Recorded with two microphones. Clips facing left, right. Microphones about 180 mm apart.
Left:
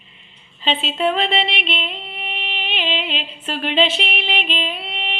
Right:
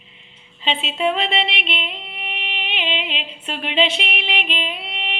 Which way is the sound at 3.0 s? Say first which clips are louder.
Left 2 dB; centre (ahead or behind).